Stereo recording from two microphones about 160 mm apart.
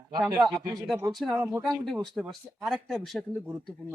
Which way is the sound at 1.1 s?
Centre (ahead or behind).